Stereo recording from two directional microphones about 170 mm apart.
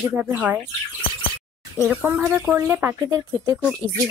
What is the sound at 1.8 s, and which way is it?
Speech, 10° right (ahead or behind).